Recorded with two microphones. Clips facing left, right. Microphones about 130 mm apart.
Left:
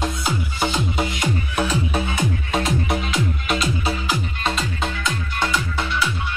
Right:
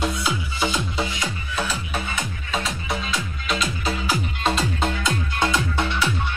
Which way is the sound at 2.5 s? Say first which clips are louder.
Left 3 dB; 50° left (ahead or behind).